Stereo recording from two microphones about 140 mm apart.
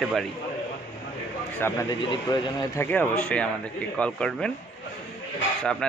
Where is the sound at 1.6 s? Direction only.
20° left (ahead or behind).